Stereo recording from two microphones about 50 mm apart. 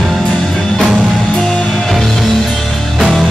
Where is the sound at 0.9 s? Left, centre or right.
Centre.